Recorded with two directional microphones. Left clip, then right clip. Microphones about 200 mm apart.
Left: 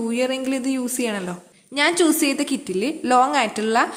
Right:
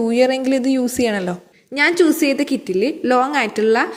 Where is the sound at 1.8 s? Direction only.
10° right (ahead or behind).